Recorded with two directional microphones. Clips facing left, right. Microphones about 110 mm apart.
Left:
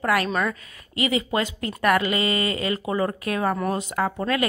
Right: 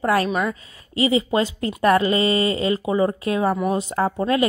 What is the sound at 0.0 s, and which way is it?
A woman's voice, 30° right (ahead or behind).